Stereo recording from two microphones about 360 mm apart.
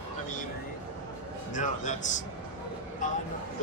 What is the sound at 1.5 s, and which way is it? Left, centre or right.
Speech, left.